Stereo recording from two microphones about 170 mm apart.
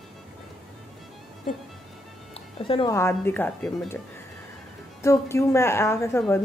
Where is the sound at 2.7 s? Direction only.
30° left (ahead or behind).